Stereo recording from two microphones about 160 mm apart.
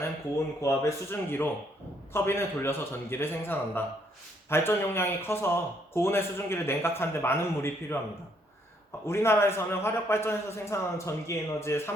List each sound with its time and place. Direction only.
0.6 s a man's voice: 15° left (ahead or behind)
9.0 s a man's voice: 15° left (ahead or behind)